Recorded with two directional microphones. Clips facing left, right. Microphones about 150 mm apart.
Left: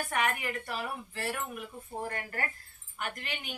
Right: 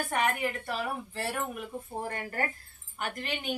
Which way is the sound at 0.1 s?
30° right (ahead or behind).